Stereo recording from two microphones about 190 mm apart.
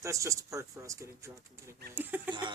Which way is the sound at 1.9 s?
10° right (ahead or behind).